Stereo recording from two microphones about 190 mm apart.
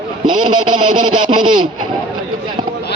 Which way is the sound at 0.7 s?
25° right (ahead or behind).